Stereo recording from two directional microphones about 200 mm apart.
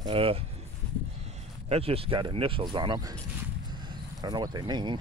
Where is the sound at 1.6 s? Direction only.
30° right (ahead or behind).